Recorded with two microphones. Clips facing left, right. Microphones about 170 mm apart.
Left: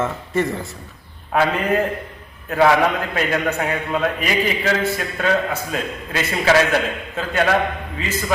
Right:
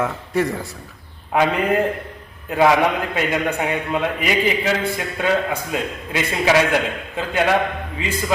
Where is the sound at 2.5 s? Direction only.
15° right (ahead or behind).